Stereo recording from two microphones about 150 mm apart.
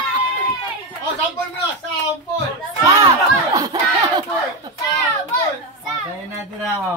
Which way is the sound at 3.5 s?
25° right (ahead or behind).